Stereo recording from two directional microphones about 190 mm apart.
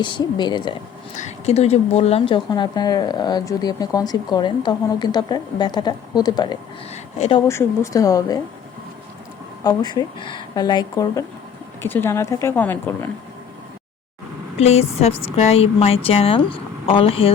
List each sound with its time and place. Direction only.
0.0 s a woman's voice: 25° left (ahead or behind)
1.1 s a woman's voice: 35° left (ahead or behind); by 6.6 s 20° left (ahead or behind)
6.9 s speech: 30° left (ahead or behind)
7.4 s speech: 15° left (ahead or behind)
9.6 s a woman's voice: 20° left (ahead or behind)
14.6 s a woman's voice: 35° left (ahead or behind)